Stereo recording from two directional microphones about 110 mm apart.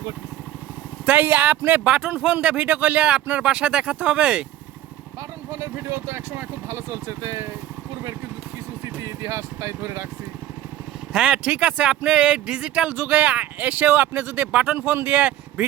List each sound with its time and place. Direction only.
1.0 s speech: 15° right (ahead or behind)
5.5 s speech: 25° right (ahead or behind)
8.8 s speech: 25° right (ahead or behind)
11.1 s speech: 10° right (ahead or behind)